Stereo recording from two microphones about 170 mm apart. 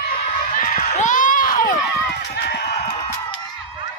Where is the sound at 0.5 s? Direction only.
55° left (ahead or behind).